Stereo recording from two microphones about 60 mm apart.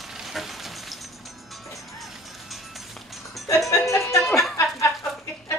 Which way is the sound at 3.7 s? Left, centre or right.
Left.